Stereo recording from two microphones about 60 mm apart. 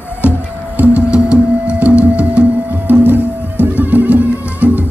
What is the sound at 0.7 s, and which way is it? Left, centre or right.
Music, right.